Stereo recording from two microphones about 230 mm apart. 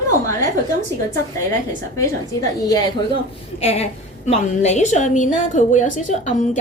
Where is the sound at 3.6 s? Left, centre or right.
Left.